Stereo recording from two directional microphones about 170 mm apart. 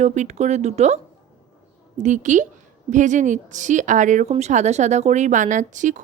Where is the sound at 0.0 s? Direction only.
45° right (ahead or behind).